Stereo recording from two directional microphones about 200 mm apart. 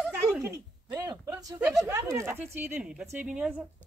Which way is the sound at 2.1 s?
10° right (ahead or behind).